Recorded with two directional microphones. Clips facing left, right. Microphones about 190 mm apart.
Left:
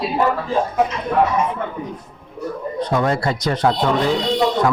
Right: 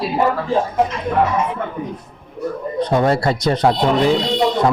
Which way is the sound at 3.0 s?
30° right (ahead or behind).